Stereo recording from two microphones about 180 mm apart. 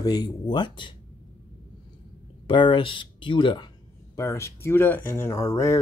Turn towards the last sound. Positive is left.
turn(degrees=15)  # may be behind; listen again after turning